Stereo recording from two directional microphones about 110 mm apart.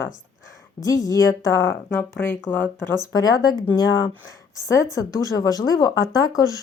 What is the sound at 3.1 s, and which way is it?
A woman's voice, 35° left (ahead or behind).